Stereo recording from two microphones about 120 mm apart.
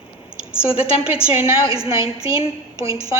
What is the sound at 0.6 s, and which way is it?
Speech, 10° right (ahead or behind).